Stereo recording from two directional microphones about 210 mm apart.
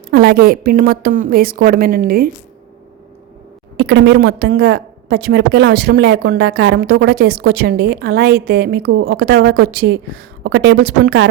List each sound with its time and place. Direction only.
0.1 s a woman's voice: 50° right (ahead or behind)
3.8 s a woman's voice: 55° right (ahead or behind)